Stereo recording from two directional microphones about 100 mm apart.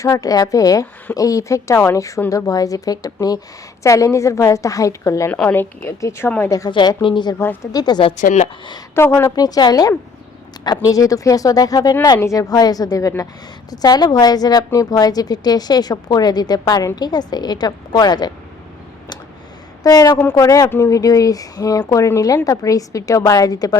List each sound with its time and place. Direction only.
0.0 s a woman's voice: 35° left (ahead or behind)
5.3 s a woman's voice: 15° left (ahead or behind)
6.7 s a woman's voice: 55° left (ahead or behind)
7.3 s a woman's voice: 25° left (ahead or behind)
7.7 s a woman's voice: 45° left (ahead or behind)
9.0 s a woman's voice: 25° left (ahead or behind); by 18.3 s 45° left (ahead or behind)
19.8 s a woman's voice: 35° left (ahead or behind)